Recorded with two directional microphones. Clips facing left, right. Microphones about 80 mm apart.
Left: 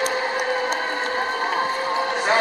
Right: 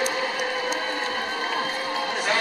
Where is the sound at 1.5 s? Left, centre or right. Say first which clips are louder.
Left 5 dB; left.